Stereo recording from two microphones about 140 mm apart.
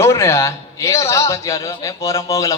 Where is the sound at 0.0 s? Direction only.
20° left (ahead or behind).